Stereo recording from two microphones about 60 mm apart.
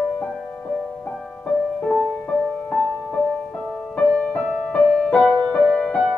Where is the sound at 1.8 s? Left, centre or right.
Centre.